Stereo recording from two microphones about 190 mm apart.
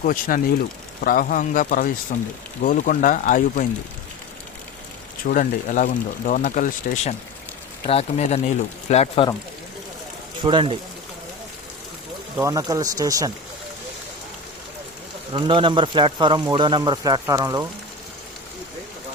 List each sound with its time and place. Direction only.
0.0 s speech: 45° left (ahead or behind)
5.3 s speech: 45° left (ahead or behind)
10.4 s a man's voice: 25° right (ahead or behind)
12.4 s a man's voice: 15° right (ahead or behind)
15.3 s a man's voice: 25° right (ahead or behind)